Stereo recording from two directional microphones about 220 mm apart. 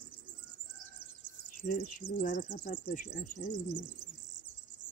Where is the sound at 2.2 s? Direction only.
35° left (ahead or behind).